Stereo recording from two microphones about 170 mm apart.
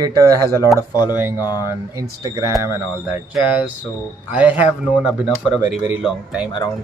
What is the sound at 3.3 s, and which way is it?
Speech, 5° right (ahead or behind).